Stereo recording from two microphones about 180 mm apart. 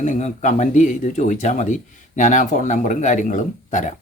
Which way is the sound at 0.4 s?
45° left (ahead or behind).